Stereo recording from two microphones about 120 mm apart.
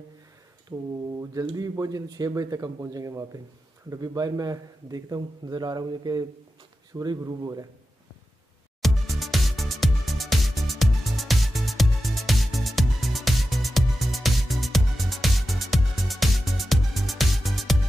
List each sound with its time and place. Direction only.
0.7 s a man's voice: 30° right (ahead or behind)
8.8 s music: centre (ahead or behind)